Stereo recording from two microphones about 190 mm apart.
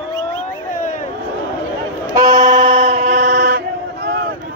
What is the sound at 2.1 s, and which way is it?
Vehicle, 20° right (ahead or behind).